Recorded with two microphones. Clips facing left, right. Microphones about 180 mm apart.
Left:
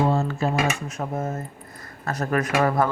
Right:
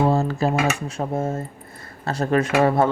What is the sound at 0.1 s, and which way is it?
Speech, 35° right (ahead or behind).